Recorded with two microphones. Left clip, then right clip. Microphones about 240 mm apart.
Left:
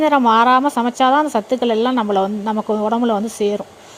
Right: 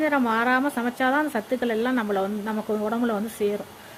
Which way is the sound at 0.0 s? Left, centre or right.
Left.